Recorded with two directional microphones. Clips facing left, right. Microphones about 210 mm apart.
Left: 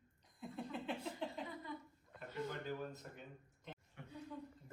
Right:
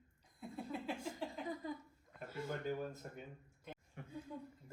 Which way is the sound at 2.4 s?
45° right (ahead or behind).